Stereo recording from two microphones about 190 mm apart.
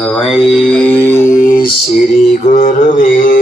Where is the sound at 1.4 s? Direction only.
45° left (ahead or behind).